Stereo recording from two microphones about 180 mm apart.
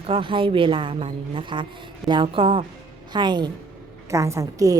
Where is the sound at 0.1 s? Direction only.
30° right (ahead or behind).